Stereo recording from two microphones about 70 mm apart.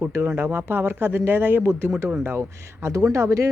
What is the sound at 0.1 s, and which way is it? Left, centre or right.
Speech, right.